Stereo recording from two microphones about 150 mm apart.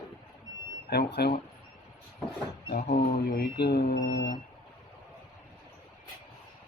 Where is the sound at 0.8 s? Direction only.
90° left.